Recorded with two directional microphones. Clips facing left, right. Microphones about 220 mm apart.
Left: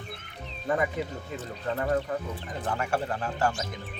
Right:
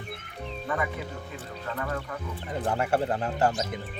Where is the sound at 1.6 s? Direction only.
35° left (ahead or behind).